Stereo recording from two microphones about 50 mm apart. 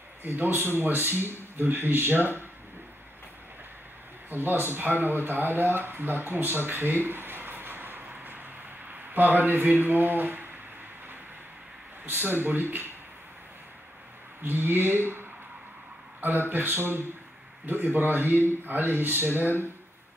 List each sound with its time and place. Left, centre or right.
0.2 s speech: right
4.3 s speech: right
12.1 s speech: right
14.4 s speech: right
16.4 s speech: right
19.4 s speech: left